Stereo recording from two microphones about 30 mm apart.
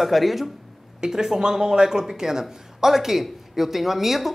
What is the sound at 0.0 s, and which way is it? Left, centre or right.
Speech, centre.